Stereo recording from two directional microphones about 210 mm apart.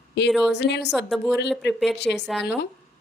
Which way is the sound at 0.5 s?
55° left (ahead or behind).